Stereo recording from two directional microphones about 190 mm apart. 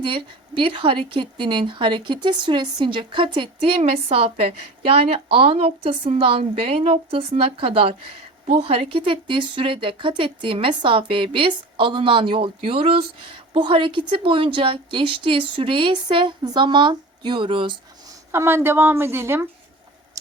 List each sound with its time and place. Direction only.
0.0 s a woman's voice: 25° right (ahead or behind)
18.3 s a woman's voice: 15° right (ahead or behind)